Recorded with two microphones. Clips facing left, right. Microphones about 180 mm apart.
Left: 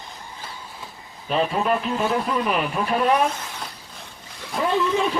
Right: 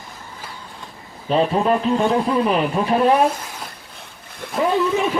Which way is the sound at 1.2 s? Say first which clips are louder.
Right 4 dB; 30° right (ahead or behind).